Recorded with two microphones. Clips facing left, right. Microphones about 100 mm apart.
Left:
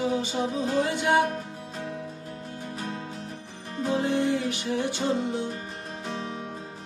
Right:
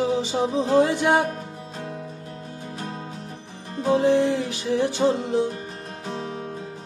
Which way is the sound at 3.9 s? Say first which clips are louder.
Right 6 dB; 90° right.